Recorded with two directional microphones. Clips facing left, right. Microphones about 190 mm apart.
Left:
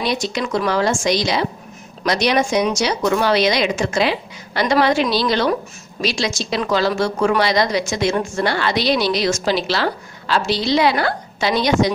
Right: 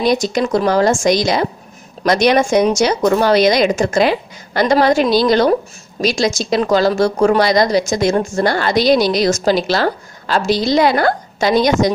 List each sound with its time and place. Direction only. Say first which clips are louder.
0.0 s a woman's voice: right 6 dB; 45° right (ahead or behind)